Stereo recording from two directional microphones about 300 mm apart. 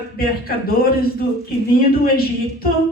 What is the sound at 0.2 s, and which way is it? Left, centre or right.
Speech, left.